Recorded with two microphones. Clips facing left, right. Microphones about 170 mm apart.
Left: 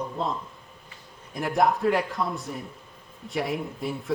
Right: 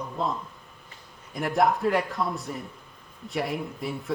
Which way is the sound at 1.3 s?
Centre (ahead or behind).